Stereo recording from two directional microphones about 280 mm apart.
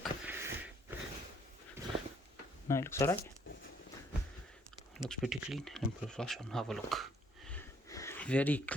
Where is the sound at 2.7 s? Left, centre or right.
Centre.